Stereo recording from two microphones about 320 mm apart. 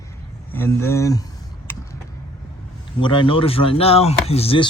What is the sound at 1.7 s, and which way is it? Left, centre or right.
Vehicle, centre.